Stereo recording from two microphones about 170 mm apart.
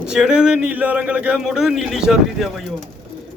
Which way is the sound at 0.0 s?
5° right (ahead or behind).